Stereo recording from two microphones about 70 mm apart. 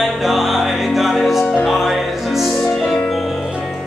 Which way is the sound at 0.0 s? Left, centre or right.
Centre.